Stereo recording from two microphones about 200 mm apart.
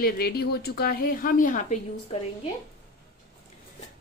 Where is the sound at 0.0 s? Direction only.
50° left (ahead or behind).